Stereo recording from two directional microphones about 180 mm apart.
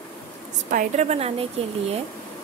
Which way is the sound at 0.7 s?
45° right (ahead or behind).